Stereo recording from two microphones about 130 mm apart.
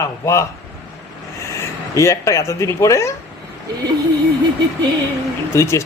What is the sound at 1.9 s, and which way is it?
Speech, 25° left (ahead or behind).